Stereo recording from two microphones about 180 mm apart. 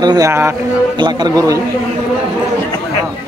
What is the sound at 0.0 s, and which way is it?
A man's voice, 20° right (ahead or behind).